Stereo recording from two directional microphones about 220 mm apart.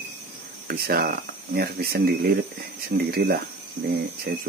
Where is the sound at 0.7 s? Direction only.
45° right (ahead or behind).